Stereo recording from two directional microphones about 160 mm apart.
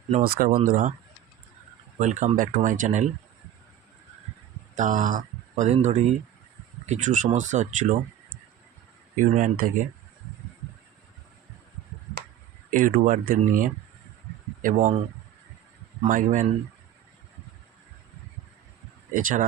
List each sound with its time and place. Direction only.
0.2 s speech: 65° right (ahead or behind)
2.0 s speech: 50° right (ahead or behind)
4.7 s speech: 50° right (ahead or behind)
9.1 s speech: 55° right (ahead or behind)
12.7 s speech: 55° right (ahead or behind)
16.0 s speech: 55° right (ahead or behind)
19.1 s speech: 55° right (ahead or behind)